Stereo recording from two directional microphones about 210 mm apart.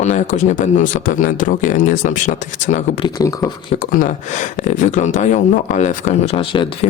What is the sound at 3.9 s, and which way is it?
Speech, 40° left (ahead or behind).